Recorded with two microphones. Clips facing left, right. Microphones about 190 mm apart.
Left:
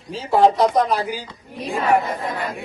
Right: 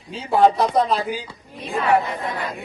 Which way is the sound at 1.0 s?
15° right (ahead or behind).